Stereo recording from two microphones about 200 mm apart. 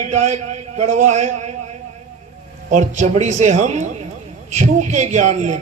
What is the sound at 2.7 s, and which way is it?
A man's voice, 40° right (ahead or behind).